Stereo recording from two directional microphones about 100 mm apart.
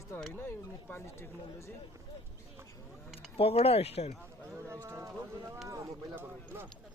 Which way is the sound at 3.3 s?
85° left.